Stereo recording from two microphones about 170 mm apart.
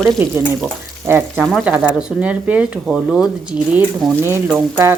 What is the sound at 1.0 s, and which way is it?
Speech, 10° right (ahead or behind).